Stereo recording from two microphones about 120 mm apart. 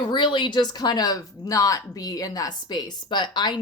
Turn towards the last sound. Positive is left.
turn(degrees=40)  # may be behind; listen again after turning